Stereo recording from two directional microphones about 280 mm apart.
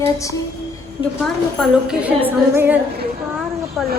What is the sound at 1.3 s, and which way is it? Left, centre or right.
A woman's voice, centre.